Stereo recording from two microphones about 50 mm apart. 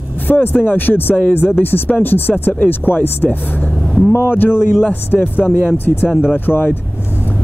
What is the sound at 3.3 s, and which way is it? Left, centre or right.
Music, left.